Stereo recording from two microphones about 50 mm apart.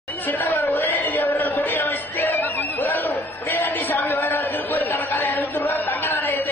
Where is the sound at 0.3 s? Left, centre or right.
Left.